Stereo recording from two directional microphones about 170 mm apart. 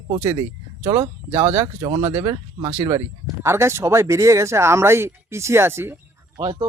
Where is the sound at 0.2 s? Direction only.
15° right (ahead or behind).